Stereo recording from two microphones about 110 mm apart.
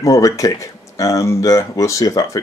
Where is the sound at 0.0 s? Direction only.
30° left (ahead or behind).